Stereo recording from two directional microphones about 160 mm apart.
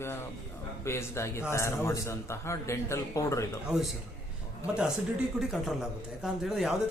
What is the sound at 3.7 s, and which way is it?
Speech, 5° right (ahead or behind).